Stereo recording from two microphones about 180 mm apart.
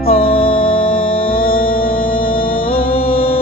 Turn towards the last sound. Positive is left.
turn(degrees=30)  # may be behind; listen again after turning